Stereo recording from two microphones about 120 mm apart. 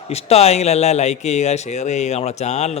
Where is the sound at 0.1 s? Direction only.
60° left (ahead or behind).